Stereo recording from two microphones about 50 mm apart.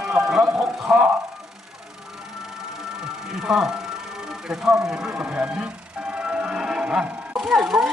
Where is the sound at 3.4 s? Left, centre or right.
Centre.